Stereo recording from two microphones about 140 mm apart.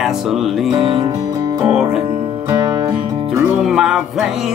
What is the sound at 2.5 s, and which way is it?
Music, 25° right (ahead or behind).